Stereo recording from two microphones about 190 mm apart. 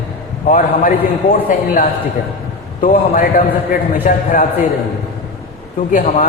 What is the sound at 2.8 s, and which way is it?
Speech, 45° left (ahead or behind).